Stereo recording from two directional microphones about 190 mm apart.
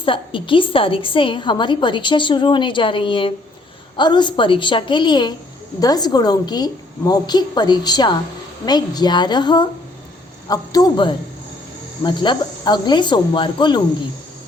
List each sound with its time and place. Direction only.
0.0 s a woman's voice: 25° left (ahead or behind)